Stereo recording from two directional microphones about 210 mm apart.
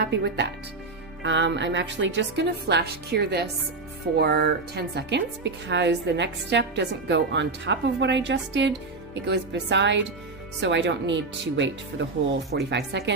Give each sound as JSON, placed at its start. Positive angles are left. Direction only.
{"t": 0.0, "sound": "a woman's voice", "side_deg": -50}